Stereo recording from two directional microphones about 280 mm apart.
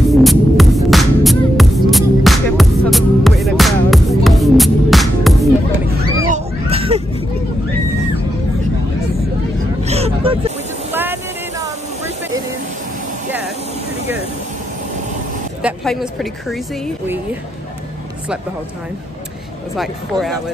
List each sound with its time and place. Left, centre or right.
0.1 s throbbing: centre
6.2 s a sound: right
9.8 s vehicle: right
10.9 s vehicle: centre
15.6 s a woman's voice: centre
19.8 s speech: centre